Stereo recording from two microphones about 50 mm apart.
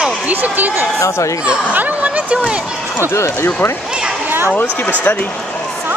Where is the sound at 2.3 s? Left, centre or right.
Centre.